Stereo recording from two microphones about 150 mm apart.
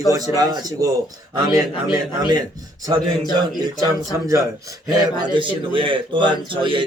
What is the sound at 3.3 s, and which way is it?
Speech, 25° right (ahead or behind).